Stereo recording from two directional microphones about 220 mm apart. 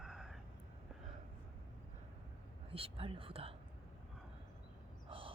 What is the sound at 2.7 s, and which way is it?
Speech, 25° right (ahead or behind).